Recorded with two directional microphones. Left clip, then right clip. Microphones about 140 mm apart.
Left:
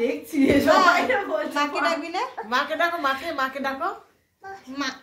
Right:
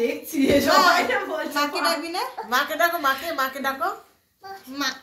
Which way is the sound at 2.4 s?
30° left (ahead or behind).